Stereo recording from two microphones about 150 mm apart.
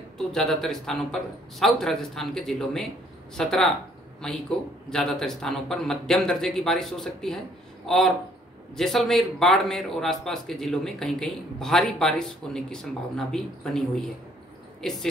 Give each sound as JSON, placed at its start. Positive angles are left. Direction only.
{"t": 0.3, "sound": "speech", "side_deg": 5}
{"t": 8.7, "sound": "speech", "side_deg": 0}